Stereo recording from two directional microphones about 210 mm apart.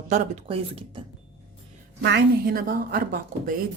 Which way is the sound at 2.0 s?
50° right (ahead or behind).